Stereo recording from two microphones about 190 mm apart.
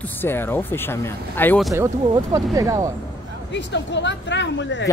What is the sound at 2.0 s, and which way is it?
Speech, 20° right (ahead or behind).